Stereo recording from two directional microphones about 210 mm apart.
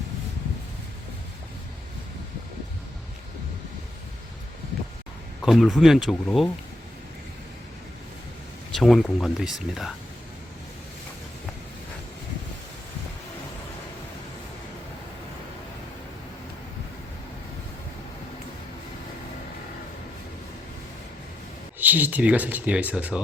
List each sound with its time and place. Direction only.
5.4 s speech: centre (ahead or behind)
8.7 s speech: centre (ahead or behind)
21.8 s speech: 10° right (ahead or behind)